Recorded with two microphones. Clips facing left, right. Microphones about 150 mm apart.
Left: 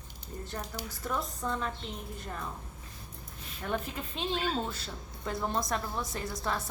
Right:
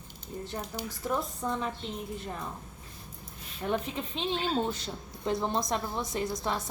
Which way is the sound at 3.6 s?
Centre (ahead or behind).